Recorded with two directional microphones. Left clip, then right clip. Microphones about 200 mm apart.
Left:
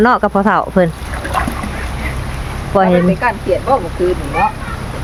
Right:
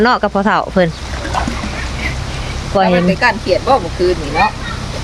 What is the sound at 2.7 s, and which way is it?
Speech, 20° left (ahead or behind).